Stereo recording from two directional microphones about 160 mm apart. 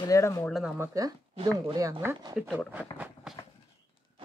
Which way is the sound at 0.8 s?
20° right (ahead or behind).